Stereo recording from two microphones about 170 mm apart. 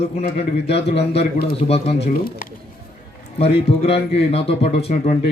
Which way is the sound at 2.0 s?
60° left (ahead or behind).